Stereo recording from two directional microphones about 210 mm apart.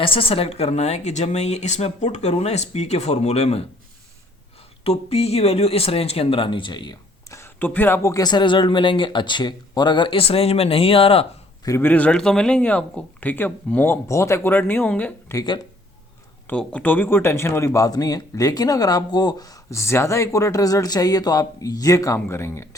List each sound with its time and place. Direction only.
0.0 s a woman's voice: 25° left (ahead or behind)
4.8 s speech: 30° left (ahead or behind)
11.7 s speech: 10° left (ahead or behind)
16.5 s speech: 5° left (ahead or behind)